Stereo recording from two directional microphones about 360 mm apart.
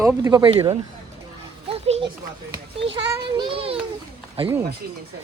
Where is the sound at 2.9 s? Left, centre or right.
Centre.